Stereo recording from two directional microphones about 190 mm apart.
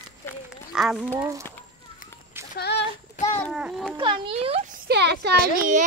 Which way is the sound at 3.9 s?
25° right (ahead or behind).